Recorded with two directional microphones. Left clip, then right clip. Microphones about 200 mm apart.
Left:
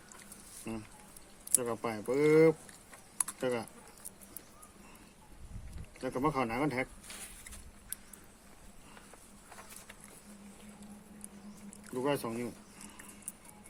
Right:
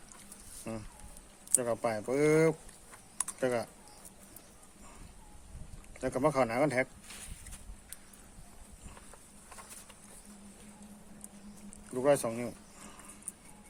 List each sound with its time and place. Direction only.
0.7 s speech: 50° right (ahead or behind)
6.0 s speech: 50° right (ahead or behind)
12.0 s speech: 50° right (ahead or behind)